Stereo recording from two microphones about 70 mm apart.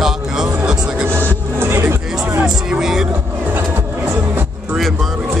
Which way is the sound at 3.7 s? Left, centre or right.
Right.